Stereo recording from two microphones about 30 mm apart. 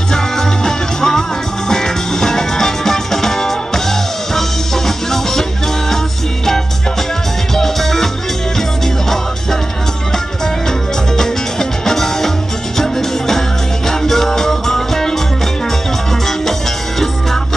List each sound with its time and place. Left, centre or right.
0.1 s music: centre
7.5 s music: centre
11.8 s music: centre